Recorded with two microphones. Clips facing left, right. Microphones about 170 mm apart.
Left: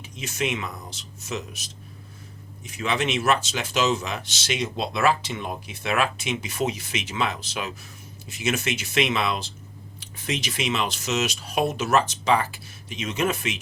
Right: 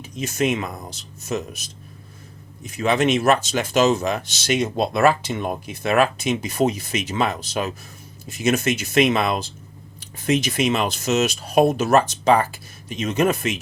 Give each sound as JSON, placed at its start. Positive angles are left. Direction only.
{"t": 0.2, "sound": "speech", "side_deg": -45}
{"t": 2.6, "sound": "speech", "side_deg": -45}